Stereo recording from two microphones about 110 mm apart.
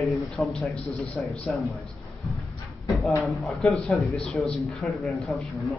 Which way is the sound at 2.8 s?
Centre (ahead or behind).